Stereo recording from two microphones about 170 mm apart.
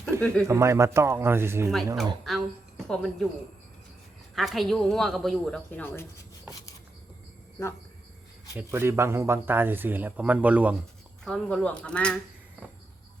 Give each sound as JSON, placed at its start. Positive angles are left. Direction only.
{"t": 0.1, "sound": "speech", "side_deg": -15}
{"t": 2.2, "sound": "a woman's voice", "side_deg": 0}
{"t": 4.4, "sound": "a woman's voice", "side_deg": 0}
{"t": 8.5, "sound": "speech", "side_deg": -15}
{"t": 11.3, "sound": "speech", "side_deg": 5}